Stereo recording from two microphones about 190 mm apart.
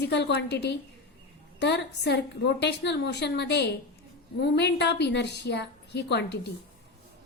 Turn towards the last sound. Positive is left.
turn(degrees=60)  # may be behind; listen again after turning